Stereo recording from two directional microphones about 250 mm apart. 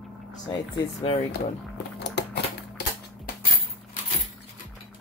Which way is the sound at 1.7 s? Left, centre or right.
Left.